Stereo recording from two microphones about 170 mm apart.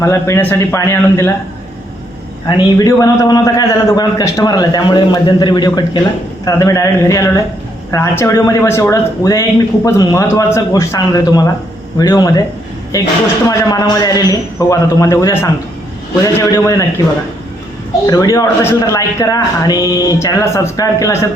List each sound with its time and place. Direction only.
0.0 s a man's voice: 15° left (ahead or behind)
2.5 s speech: 20° left (ahead or behind)
18.0 s speech: 20° left (ahead or behind)